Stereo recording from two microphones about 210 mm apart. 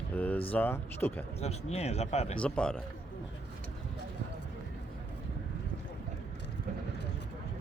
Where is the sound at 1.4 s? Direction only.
30° left (ahead or behind).